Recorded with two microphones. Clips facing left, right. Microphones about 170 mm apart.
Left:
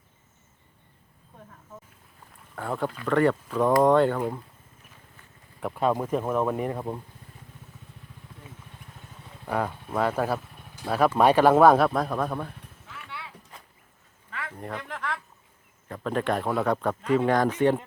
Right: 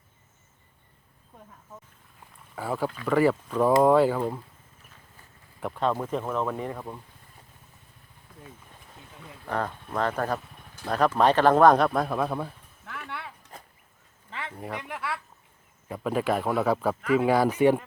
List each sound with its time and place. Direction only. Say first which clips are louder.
2.6 s speech: even; 5° right (ahead or behind)
5.5 s speech: left 2 dB; 5° left (ahead or behind); by 7.0 s 20° left (ahead or behind)
9.5 s speech: left 2 dB; 10° left (ahead or behind)
12.8 s a sound: right 4 dB; 60° right (ahead or behind)
14.3 s a sound: even; 25° right (ahead or behind)
14.6 s speech: even; 10° right (ahead or behind)